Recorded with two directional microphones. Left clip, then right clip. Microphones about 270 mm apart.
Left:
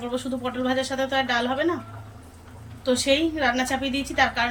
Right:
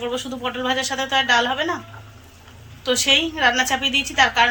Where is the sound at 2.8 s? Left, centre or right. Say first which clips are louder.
Right 4 dB; centre.